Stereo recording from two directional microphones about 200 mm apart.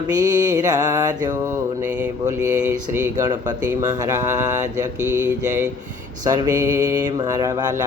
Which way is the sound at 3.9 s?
15° right (ahead or behind).